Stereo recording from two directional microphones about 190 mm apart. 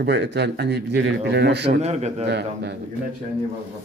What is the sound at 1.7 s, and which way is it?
Speech, 35° right (ahead or behind).